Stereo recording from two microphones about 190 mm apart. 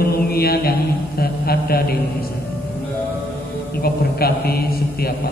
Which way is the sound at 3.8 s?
55° left (ahead or behind).